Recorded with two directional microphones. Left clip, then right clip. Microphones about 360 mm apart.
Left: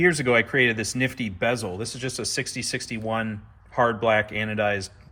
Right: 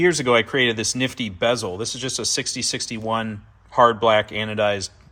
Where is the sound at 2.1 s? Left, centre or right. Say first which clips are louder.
Right 5 dB; right.